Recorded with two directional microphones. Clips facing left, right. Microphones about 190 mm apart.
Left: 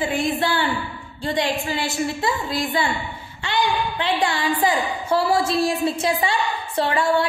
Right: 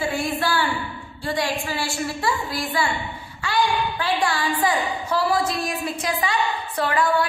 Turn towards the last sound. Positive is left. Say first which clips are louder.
# left 1 dB
turn(degrees=25)  # may be behind; listen again after turning